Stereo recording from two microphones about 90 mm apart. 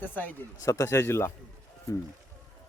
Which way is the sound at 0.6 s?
35° left (ahead or behind).